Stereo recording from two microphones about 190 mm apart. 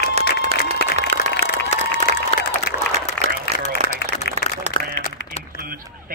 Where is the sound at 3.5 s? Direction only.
35° right (ahead or behind).